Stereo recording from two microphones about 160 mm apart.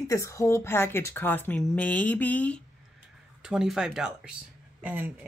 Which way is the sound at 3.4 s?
5° right (ahead or behind).